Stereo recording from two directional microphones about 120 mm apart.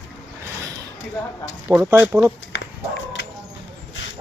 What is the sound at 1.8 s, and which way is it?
Speech, 20° right (ahead or behind).